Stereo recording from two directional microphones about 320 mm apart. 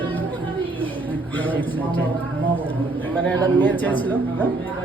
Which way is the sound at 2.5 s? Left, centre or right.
Centre.